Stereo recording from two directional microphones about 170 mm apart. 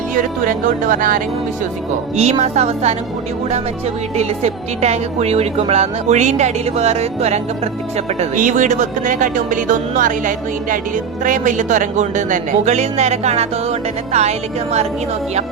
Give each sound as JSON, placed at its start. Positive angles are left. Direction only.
{"t": 0.1, "sound": "speech", "side_deg": -50}
{"t": 2.1, "sound": "a woman's voice", "side_deg": -40}
{"t": 4.2, "sound": "speech", "side_deg": -40}